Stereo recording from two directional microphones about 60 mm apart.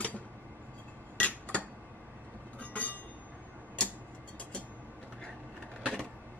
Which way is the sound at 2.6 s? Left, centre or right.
Left.